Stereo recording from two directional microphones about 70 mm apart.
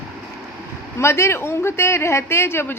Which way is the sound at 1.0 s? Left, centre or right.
Left.